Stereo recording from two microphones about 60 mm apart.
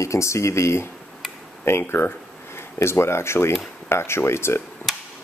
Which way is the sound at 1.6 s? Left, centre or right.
Left.